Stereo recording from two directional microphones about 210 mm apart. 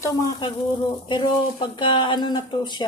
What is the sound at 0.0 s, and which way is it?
Speech, 15° left (ahead or behind).